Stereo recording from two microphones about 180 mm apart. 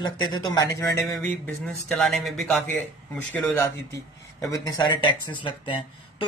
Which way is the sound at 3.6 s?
15° left (ahead or behind).